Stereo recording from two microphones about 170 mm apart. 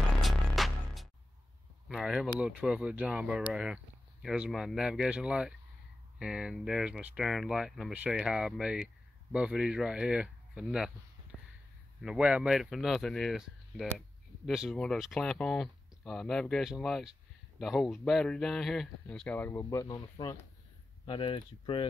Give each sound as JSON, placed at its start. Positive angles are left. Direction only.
{"t": 0.2, "sound": "music", "side_deg": 0}
{"t": 1.9, "sound": "speech", "side_deg": 0}
{"t": 11.3, "sound": "a sound", "side_deg": -5}
{"t": 12.0, "sound": "speech", "side_deg": -5}